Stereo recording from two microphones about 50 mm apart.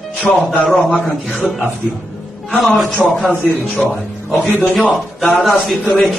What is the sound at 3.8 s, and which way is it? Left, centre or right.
Speech, left.